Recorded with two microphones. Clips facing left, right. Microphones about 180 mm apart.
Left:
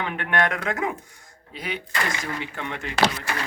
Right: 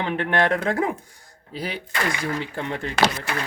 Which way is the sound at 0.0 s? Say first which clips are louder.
Right 3 dB; 30° right (ahead or behind).